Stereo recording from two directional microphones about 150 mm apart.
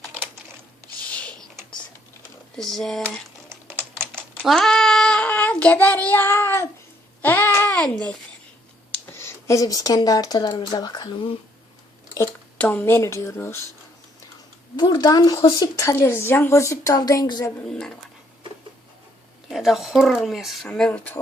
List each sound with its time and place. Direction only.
1.1 s mechanisms: 10° left (ahead or behind)
2.6 s speech: centre (ahead or behind)
4.4 s child singing: centre (ahead or behind)
7.2 s babbling: 15° left (ahead or behind)
9.1 s speech: 20° left (ahead or behind)
12.5 s speech: 10° left (ahead or behind)
14.8 s speech: 30° left (ahead or behind)
17.7 s speech: 5° left (ahead or behind)
19.5 s speech: centre (ahead or behind)